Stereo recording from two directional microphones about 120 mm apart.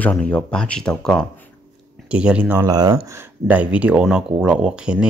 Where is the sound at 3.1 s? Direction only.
15° right (ahead or behind).